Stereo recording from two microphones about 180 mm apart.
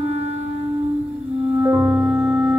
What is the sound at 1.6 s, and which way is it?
Music, 15° right (ahead or behind).